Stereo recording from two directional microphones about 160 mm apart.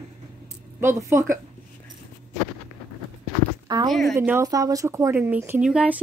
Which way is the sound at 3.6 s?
25° right (ahead or behind).